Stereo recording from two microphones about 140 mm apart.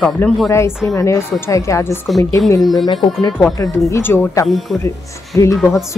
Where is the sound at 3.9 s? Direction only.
15° left (ahead or behind).